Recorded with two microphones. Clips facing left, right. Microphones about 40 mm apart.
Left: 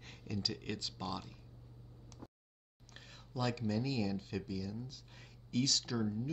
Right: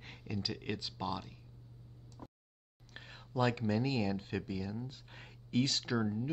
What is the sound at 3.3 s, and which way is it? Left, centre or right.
Speech, right.